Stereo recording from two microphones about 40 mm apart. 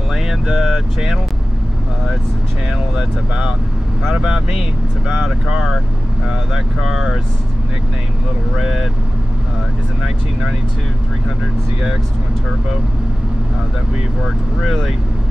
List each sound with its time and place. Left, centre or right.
0.1 s speech: centre
4.1 s speech: centre
8.5 s speech: centre